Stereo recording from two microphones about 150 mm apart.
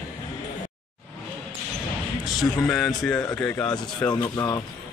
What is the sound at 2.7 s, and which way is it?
Speech, centre (ahead or behind).